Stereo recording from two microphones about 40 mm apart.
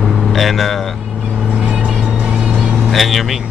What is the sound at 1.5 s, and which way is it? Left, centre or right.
Vehicle, right.